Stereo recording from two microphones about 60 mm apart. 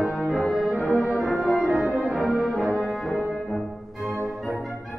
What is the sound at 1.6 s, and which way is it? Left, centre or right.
Brass instrument, centre.